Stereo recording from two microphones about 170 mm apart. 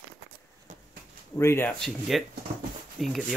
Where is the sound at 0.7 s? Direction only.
45° right (ahead or behind).